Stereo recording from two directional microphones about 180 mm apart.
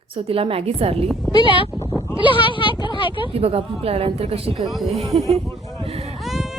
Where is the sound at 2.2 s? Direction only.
30° left (ahead or behind).